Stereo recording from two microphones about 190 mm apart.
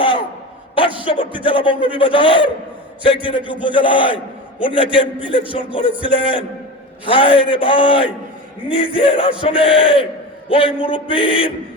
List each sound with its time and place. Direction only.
1.0 s speech: 25° left (ahead or behind)